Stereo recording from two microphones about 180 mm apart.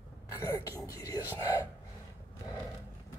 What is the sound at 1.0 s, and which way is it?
Whispering, 20° left (ahead or behind).